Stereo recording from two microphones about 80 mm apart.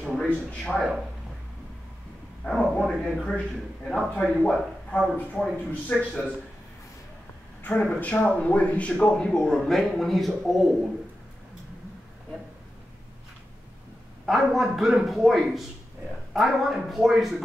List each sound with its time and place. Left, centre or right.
0.2 s a man's voice: centre
0.7 s a man's voice: centre
2.5 s a man's voice: centre
5.4 s a man's voice: centre
7.8 s a man's voice: centre
14.2 s a man's voice: centre